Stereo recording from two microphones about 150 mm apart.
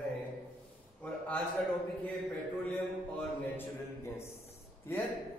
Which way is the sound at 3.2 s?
15° left (ahead or behind).